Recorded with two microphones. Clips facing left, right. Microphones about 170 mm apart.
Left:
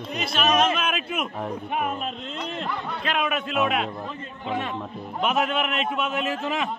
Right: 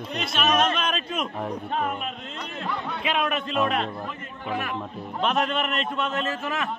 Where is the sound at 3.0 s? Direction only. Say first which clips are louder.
Even; centre (ahead or behind).